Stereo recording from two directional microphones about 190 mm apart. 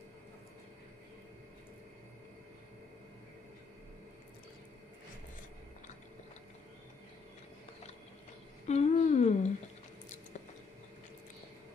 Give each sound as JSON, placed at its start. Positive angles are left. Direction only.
{"t": 8.6, "sound": "humming", "side_deg": 35}